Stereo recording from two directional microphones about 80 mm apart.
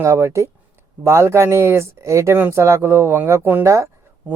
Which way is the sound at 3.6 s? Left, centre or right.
Right.